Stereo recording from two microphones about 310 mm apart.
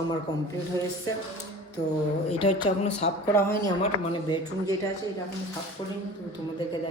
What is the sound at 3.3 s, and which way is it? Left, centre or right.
Speech, centre.